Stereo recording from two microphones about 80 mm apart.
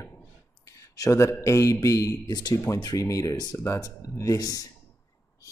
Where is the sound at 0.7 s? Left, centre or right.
Left.